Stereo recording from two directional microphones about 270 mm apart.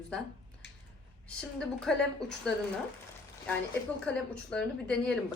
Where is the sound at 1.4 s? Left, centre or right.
Centre.